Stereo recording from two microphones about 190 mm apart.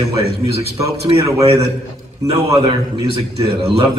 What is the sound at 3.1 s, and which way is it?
Speech, 30° right (ahead or behind).